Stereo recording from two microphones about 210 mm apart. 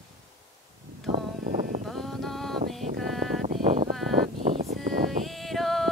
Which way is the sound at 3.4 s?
35° right (ahead or behind).